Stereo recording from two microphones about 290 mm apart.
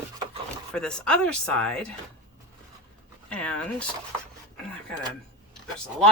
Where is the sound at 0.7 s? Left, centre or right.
Centre.